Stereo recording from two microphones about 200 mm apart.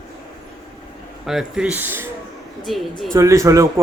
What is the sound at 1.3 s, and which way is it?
Speech, 5° right (ahead or behind).